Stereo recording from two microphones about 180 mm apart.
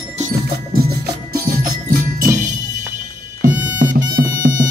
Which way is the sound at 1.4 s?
55° right (ahead or behind).